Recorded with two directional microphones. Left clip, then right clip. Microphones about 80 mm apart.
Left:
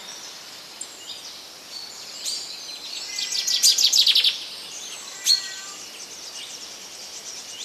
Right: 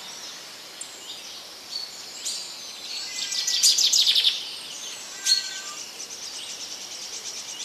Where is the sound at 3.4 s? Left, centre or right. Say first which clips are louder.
Left 2 dB; centre.